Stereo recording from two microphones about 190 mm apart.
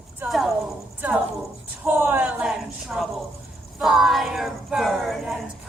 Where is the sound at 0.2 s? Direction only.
Centre (ahead or behind).